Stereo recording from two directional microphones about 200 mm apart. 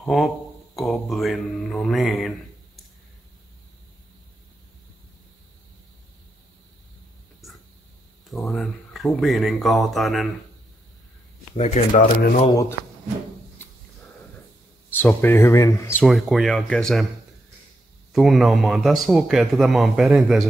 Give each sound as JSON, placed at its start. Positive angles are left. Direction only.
{"t": 0.0, "sound": "a man's voice", "side_deg": 0}
{"t": 8.3, "sound": "a man's voice", "side_deg": 0}
{"t": 11.5, "sound": "speech", "side_deg": 35}
{"t": 12.4, "sound": "speech", "side_deg": 15}
{"t": 14.9, "sound": "speech", "side_deg": 10}
{"t": 16.1, "sound": "a man's voice", "side_deg": 0}
{"t": 18.1, "sound": "a man's voice", "side_deg": 0}